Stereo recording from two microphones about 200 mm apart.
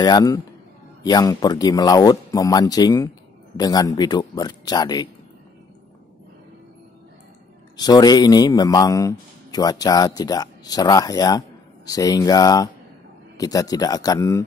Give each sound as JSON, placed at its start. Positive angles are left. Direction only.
{"t": 0.0, "sound": "a man's voice", "side_deg": 20}
{"t": 7.7, "sound": "a man's voice", "side_deg": 20}